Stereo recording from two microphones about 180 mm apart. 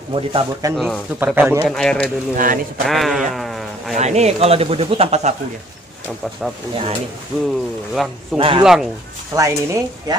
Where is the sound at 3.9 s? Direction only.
40° right (ahead or behind).